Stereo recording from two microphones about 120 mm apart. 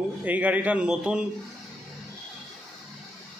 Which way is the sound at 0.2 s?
15° right (ahead or behind).